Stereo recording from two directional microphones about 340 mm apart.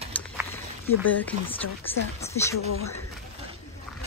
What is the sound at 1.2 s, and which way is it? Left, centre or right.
Speech, centre.